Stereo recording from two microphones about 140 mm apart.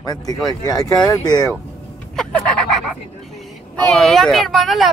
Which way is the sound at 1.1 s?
30° left (ahead or behind).